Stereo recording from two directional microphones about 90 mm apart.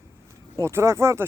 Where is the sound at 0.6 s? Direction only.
30° right (ahead or behind).